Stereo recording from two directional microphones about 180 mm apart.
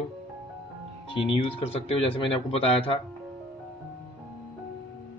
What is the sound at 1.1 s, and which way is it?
Speech, 30° left (ahead or behind).